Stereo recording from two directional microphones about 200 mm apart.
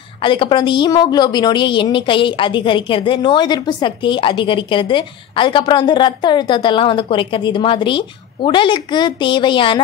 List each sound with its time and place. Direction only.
0.2 s a woman's voice: 25° left (ahead or behind)